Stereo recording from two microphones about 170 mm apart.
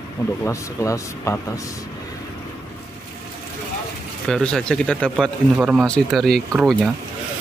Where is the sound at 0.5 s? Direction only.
20° left (ahead or behind).